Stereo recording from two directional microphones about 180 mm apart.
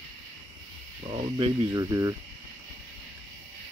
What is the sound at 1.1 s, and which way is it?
Speech, 30° right (ahead or behind).